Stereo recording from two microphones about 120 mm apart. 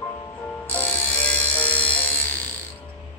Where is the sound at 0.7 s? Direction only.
15° left (ahead or behind).